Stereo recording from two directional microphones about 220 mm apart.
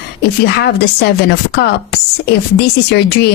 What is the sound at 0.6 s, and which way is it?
Speech, 50° left (ahead or behind).